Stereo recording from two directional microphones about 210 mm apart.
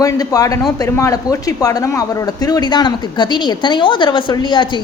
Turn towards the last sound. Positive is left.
turn(degrees=20)  # may be behind; listen again after turning